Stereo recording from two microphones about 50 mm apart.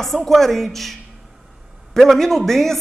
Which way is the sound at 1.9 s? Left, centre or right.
Centre.